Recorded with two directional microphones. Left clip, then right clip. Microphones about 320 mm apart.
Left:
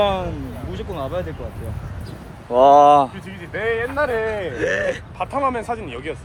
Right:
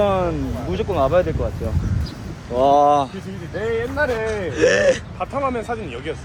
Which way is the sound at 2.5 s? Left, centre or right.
Left.